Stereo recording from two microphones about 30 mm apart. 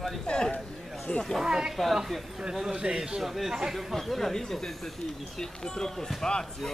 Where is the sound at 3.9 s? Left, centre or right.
Centre.